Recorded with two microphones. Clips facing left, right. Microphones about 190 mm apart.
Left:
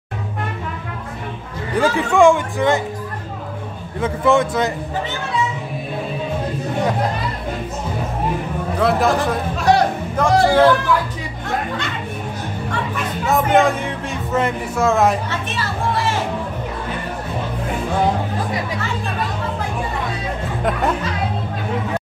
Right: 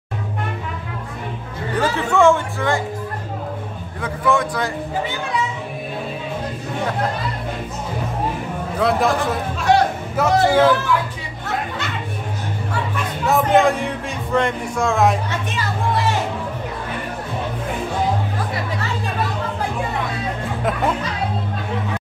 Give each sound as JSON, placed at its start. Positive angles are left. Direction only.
{"t": 1.8, "sound": "speech", "side_deg": 15}
{"t": 4.0, "sound": "a man's voice", "side_deg": 25}
{"t": 8.7, "sound": "speech", "side_deg": 0}
{"t": 12.9, "sound": "speech", "side_deg": 0}